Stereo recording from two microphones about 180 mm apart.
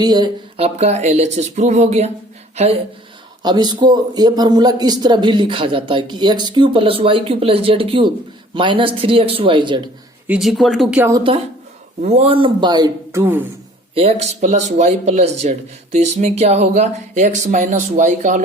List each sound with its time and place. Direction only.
0.0 s speech: 20° right (ahead or behind)
3.4 s speech: 25° right (ahead or behind)
10.2 s speech: 5° right (ahead or behind)
11.3 s speech: 30° right (ahead or behind); by 13.5 s 10° right (ahead or behind)
13.9 s speech: 35° right (ahead or behind)